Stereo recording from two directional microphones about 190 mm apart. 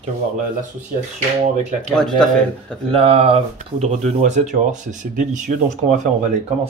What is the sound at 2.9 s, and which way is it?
Speech, 30° right (ahead or behind).